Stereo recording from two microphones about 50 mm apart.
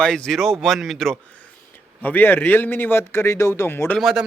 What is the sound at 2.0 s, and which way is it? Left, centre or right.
Speech, left.